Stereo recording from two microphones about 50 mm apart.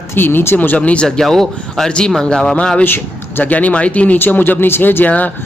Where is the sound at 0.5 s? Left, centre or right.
Left.